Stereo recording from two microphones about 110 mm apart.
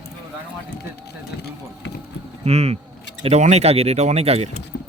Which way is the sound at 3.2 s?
80° right.